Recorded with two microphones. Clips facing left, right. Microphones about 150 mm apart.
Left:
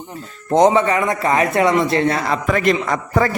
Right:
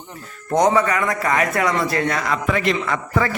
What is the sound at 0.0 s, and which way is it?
A man's voice, 25° left (ahead or behind).